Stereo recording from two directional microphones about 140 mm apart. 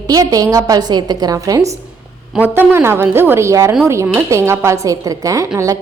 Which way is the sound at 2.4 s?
10° right (ahead or behind).